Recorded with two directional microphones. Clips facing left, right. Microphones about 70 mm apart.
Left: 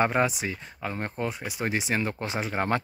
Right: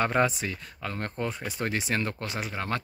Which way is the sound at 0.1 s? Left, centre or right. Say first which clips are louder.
Even; centre.